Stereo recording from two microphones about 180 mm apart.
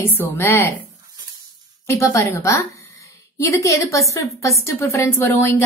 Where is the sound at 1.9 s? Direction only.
15° left (ahead or behind).